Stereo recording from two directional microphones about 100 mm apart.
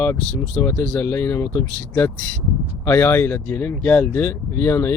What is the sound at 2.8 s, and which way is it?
Speech, 20° left (ahead or behind).